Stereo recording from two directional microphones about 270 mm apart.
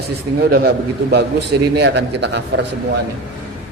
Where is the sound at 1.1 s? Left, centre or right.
Right.